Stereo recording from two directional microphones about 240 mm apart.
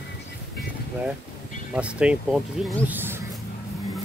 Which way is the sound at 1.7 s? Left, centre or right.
Centre.